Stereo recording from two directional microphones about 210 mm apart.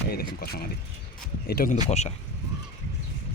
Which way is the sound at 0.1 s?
45° left (ahead or behind).